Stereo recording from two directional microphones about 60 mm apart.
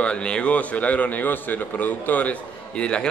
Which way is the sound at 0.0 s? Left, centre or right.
Centre.